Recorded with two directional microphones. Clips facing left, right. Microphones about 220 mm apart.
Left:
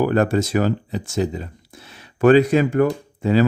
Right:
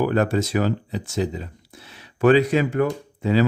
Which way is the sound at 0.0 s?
45° left (ahead or behind).